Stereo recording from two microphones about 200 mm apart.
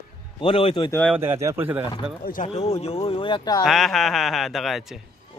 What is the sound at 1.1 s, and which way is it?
Speech, 10° right (ahead or behind).